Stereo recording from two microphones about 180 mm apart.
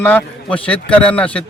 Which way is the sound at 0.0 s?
10° left (ahead or behind).